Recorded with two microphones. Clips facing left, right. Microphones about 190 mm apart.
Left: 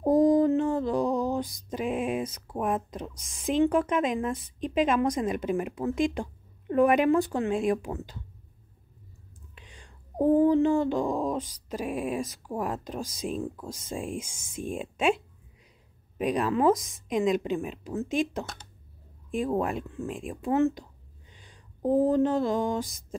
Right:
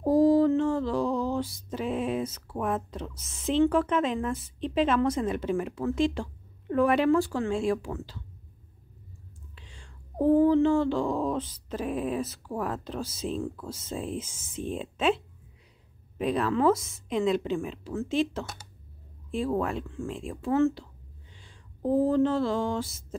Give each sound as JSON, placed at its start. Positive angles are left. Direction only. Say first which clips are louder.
{"t": 0.0, "sound": "a sound", "louder": "even", "side_deg": 20}
{"t": 3.2, "sound": "a woman's voice", "louder": "right 2 dB", "side_deg": -5}
{"t": 3.4, "sound": "speech", "louder": "even", "side_deg": 15}
{"t": 9.6, "sound": "speech", "louder": "left 2 dB", "side_deg": 15}